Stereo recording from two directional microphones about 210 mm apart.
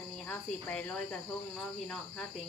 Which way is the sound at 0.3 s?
5° left (ahead or behind).